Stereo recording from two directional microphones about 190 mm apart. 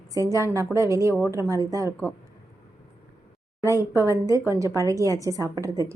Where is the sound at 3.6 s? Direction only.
15° right (ahead or behind).